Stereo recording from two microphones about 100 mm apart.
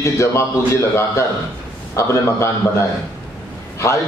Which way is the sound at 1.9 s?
30° left (ahead or behind).